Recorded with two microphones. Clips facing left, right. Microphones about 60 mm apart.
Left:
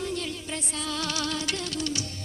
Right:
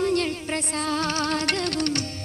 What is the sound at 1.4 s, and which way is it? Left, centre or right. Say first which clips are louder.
Music: right 6 dB; right.